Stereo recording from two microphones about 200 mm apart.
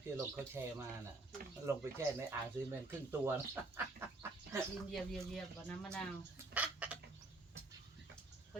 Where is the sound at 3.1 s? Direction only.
10° right (ahead or behind).